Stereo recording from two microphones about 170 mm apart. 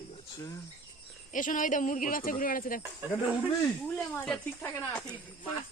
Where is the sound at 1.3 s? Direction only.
50° left (ahead or behind).